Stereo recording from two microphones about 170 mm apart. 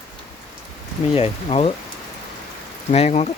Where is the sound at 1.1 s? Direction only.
35° left (ahead or behind).